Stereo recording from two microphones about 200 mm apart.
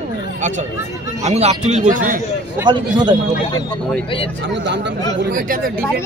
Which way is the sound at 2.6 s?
20° right (ahead or behind).